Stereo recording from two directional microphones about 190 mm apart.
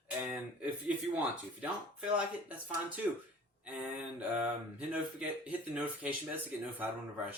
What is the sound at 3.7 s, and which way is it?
Speech, 10° right (ahead or behind).